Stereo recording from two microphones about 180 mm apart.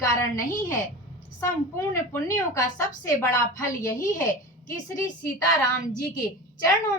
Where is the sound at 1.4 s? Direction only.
15° left (ahead or behind).